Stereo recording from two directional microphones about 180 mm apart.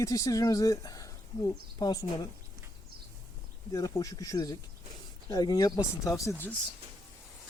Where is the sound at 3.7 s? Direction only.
20° left (ahead or behind).